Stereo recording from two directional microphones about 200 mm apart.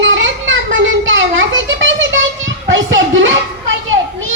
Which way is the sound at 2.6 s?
70° right (ahead or behind).